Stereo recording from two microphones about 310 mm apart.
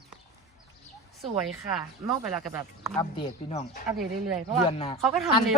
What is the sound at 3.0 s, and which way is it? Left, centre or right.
Speech, centre.